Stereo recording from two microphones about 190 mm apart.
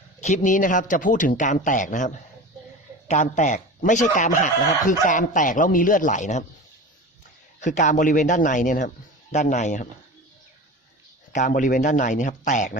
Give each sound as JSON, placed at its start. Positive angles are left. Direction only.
{"t": 0.2, "sound": "a man's voice", "side_deg": 40}
{"t": 7.6, "sound": "a man's voice", "side_deg": 40}
{"t": 11.3, "sound": "a man's voice", "side_deg": 40}